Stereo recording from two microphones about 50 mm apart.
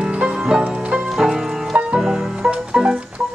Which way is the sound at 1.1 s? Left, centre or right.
Centre.